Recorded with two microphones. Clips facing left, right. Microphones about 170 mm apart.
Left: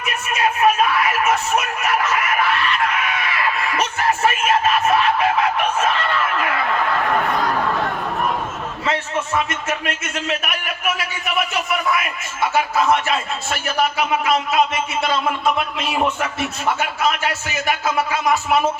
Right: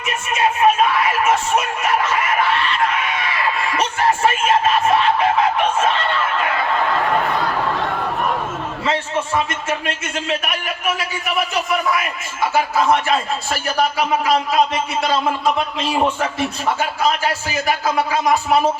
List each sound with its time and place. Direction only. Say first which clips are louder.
0.0 s music: right 2 dB; 25° right (ahead or behind)
8.9 s a man's voice: right 1 dB; 30° right (ahead or behind)